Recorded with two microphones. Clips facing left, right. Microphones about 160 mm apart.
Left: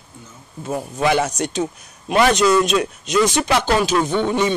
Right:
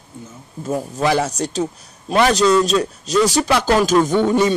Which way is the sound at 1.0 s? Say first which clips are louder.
Left 1 dB; 35° right (ahead or behind).